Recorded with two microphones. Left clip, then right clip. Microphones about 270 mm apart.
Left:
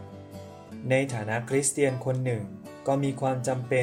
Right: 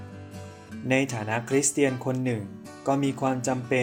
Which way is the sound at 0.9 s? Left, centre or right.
Centre.